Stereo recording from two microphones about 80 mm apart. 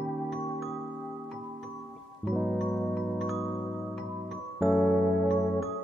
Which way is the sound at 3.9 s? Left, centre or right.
Centre.